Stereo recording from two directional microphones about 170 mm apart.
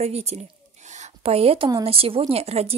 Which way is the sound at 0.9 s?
40° right (ahead or behind).